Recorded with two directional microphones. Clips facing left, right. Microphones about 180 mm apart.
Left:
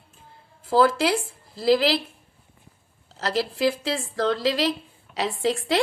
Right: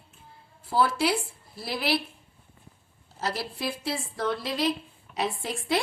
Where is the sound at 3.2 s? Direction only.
90° left.